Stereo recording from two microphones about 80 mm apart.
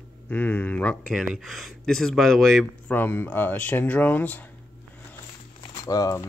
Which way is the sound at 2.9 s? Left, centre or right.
Left.